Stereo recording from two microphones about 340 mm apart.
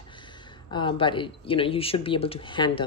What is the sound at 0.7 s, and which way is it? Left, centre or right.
A woman's voice, centre.